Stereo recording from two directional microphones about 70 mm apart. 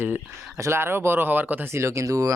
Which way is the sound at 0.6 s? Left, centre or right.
Right.